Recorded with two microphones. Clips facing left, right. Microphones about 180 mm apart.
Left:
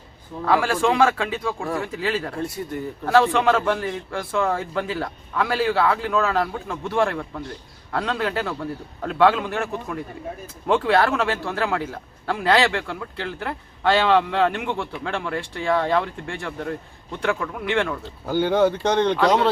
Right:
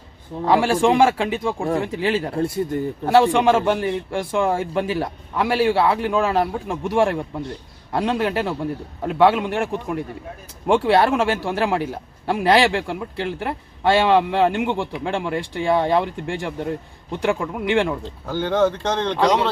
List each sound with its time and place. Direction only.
0.4 s a man's voice: 20° right (ahead or behind)
14.7 s a man's voice: 25° right (ahead or behind)
15.0 s a man's voice: 15° right (ahead or behind)
18.3 s speech: 10° left (ahead or behind)